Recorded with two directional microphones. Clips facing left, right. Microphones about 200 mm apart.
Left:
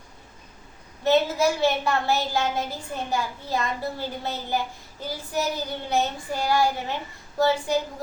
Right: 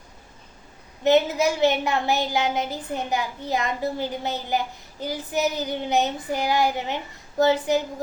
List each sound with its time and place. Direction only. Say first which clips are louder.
1.0 s a woman's voice: right 2 dB; 20° right (ahead or behind)